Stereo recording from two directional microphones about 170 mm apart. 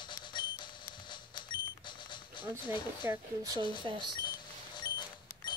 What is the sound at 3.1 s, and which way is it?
Speech, 20° right (ahead or behind).